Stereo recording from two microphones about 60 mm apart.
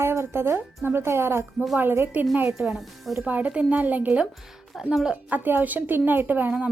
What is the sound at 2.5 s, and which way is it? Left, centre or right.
Speech, centre.